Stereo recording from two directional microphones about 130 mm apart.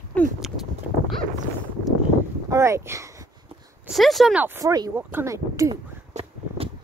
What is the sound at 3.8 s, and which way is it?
Speech, centre (ahead or behind).